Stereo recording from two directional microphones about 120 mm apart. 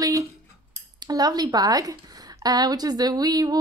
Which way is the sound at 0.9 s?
35° right (ahead or behind).